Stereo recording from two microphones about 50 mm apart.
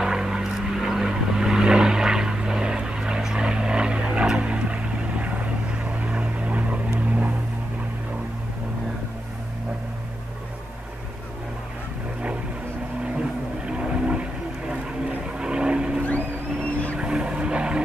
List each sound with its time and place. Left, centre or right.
0.0 s vehicle: centre; by 7.3 s right
13.7 s vehicle: centre
17.0 s vehicle: centre